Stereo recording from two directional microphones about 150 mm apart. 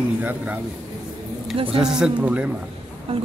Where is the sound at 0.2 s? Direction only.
10° right (ahead or behind).